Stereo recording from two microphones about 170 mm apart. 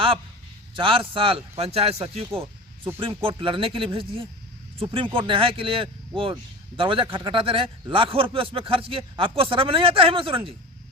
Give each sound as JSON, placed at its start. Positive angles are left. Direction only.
{"t": 0.8, "sound": "speech", "side_deg": -30}
{"t": 2.3, "sound": "snake", "side_deg": -15}
{"t": 3.0, "sound": "speech", "side_deg": -30}